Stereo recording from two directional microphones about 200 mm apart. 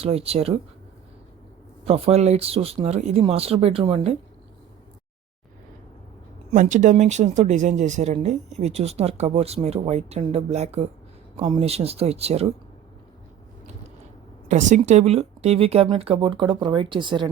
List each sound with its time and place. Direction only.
0.0 s speech: 30° right (ahead or behind)
1.8 s speech: 30° right (ahead or behind)
6.5 s speech: 35° right (ahead or behind)
14.4 s speech: 35° right (ahead or behind)